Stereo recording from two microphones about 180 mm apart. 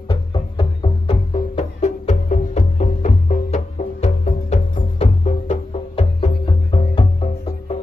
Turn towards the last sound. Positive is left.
turn(degrees=30)  # may be behind; listen again after turning